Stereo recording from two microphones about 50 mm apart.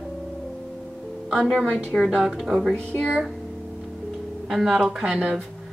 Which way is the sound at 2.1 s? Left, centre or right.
Centre.